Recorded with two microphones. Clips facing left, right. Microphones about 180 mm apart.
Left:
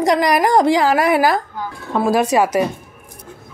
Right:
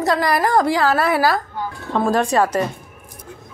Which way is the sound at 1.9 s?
5° left (ahead or behind).